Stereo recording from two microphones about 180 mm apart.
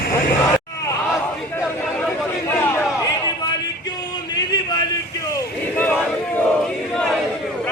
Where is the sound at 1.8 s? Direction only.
5° left (ahead or behind).